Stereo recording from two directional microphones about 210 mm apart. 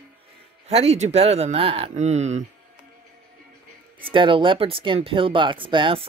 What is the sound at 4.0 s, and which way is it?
Music, 25° right (ahead or behind).